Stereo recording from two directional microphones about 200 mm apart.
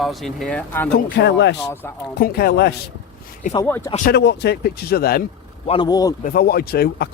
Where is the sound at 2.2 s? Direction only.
50° left (ahead or behind).